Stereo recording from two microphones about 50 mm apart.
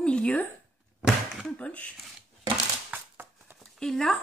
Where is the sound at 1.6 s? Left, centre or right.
Left.